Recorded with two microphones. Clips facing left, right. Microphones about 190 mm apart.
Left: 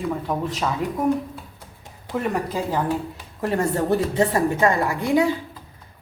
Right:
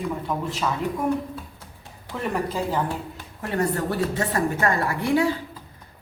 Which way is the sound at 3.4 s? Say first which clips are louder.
Left 3 dB; 25° left (ahead or behind).